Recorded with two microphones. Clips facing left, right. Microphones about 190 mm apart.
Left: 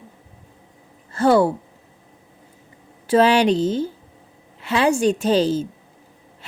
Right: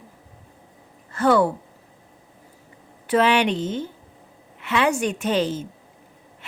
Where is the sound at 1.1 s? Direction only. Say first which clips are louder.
Left 2 dB; 30° left (ahead or behind).